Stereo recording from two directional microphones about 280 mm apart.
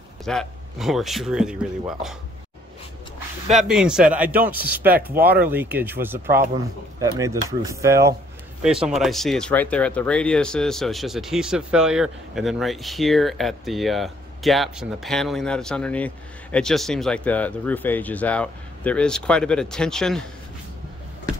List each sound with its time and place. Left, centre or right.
0.2 s speech: centre
3.5 s speech: centre
5.1 s speech: right
5.5 s speech: centre